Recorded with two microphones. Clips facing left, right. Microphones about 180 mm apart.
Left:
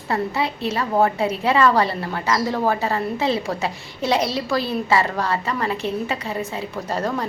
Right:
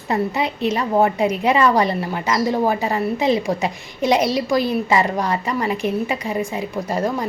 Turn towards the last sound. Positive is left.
turn(degrees=-10)  # may be behind; listen again after turning